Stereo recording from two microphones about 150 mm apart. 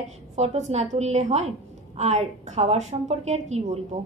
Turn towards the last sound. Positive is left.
turn(degrees=-50)  # may be behind; listen again after turning